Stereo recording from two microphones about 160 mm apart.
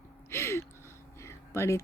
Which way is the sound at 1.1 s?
15° left (ahead or behind).